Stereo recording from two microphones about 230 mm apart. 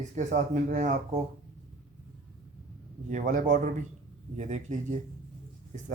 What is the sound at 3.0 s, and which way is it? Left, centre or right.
A man's voice, right.